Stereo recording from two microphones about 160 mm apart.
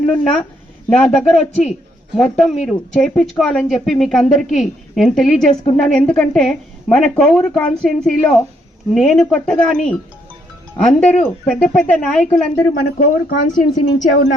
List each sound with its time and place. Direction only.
0.0 s a woman's voice: 10° left (ahead or behind)
12.8 s speech: 50° left (ahead or behind)